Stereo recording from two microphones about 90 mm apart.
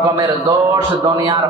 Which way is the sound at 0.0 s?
40° right (ahead or behind).